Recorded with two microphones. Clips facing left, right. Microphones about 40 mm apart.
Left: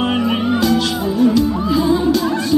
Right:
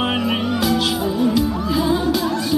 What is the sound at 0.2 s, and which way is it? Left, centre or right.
Music, centre.